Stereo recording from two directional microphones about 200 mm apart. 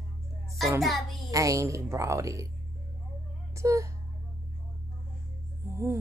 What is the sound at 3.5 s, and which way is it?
Speech, 15° right (ahead or behind).